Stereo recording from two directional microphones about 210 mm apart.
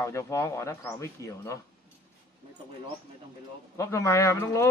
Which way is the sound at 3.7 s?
15° left (ahead or behind).